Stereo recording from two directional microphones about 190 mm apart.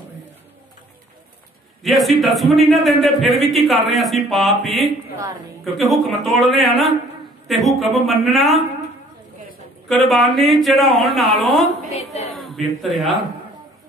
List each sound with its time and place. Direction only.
1.8 s a man's voice: centre (ahead or behind)
9.8 s a man's voice: centre (ahead or behind)
11.9 s a sound: 35° left (ahead or behind)
12.4 s a man's voice: centre (ahead or behind)